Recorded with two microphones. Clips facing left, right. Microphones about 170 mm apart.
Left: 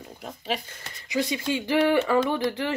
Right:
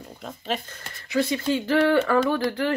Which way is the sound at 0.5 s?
15° left (ahead or behind).